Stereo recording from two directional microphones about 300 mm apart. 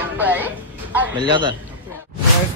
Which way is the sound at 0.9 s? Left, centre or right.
Centre.